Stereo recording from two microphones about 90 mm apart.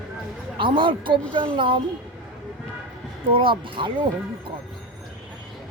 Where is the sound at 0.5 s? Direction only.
65° right (ahead or behind).